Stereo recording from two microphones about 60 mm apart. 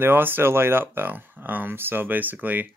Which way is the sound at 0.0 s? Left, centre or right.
Right.